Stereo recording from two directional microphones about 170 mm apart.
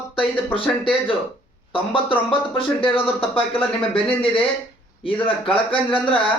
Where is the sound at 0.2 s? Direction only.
30° left (ahead or behind).